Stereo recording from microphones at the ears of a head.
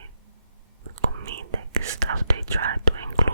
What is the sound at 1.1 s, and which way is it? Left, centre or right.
Whispering, right.